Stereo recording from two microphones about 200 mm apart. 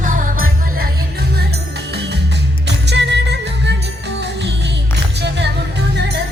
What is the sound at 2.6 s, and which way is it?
Music, 60° right (ahead or behind).